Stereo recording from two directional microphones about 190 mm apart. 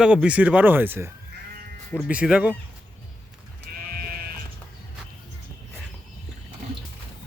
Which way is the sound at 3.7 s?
50° right (ahead or behind).